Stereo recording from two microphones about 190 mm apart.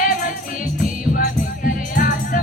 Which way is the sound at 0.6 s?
45° left (ahead or behind).